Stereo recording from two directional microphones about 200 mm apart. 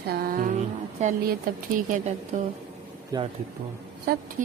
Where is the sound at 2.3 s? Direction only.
35° right (ahead or behind).